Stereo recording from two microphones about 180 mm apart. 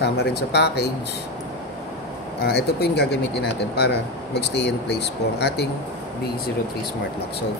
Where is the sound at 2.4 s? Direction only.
60° left (ahead or behind).